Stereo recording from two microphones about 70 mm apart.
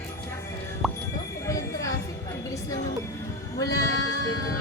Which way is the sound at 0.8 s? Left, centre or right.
Centre.